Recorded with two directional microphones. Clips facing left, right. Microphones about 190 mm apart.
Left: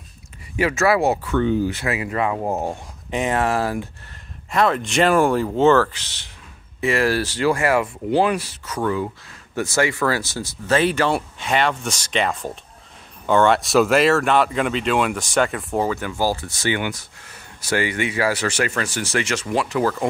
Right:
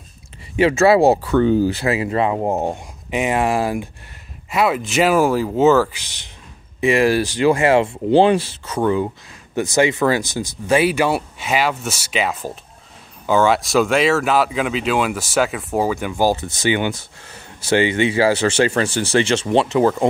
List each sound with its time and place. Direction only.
0.6 s speech: 25° right (ahead or behind)
3.1 s speech: 10° right (ahead or behind)